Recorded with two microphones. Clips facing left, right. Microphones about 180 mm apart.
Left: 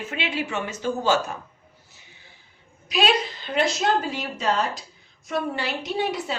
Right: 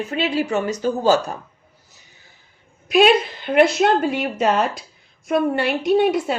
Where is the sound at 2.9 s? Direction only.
55° right (ahead or behind).